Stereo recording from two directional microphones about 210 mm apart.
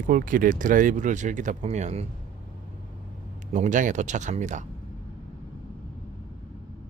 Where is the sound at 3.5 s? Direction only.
35° right (ahead or behind).